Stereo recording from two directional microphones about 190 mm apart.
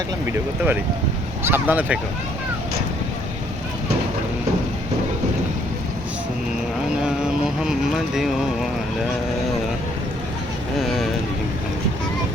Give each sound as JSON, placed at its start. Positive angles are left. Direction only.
{"t": 0.3, "sound": "speech", "side_deg": -10}
{"t": 7.0, "sound": "a sound", "side_deg": -5}
{"t": 10.8, "sound": "speech", "side_deg": 0}